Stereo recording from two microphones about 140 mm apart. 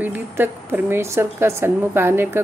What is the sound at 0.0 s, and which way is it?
A woman's voice, 15° right (ahead or behind).